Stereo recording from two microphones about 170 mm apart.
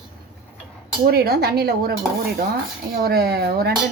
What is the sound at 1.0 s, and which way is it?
A woman's voice, 65° right (ahead or behind).